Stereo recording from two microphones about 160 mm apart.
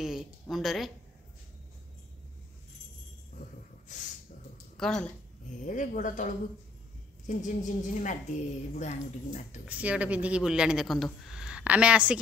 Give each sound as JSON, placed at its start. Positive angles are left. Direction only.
{"t": 0.0, "sound": "speech", "side_deg": -5}
{"t": 4.7, "sound": "speech", "side_deg": 5}
{"t": 5.7, "sound": "a woman's voice", "side_deg": 55}
{"t": 9.7, "sound": "a woman's voice", "side_deg": -10}